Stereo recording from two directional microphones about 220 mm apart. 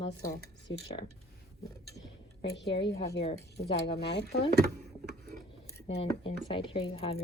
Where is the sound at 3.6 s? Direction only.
25° left (ahead or behind).